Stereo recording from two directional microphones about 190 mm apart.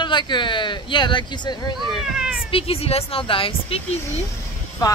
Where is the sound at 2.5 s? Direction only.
30° left (ahead or behind).